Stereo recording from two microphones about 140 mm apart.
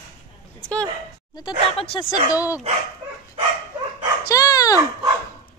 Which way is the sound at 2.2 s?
25° left (ahead or behind).